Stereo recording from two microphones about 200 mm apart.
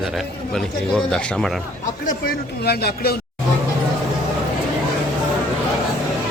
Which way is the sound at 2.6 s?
55° left (ahead or behind).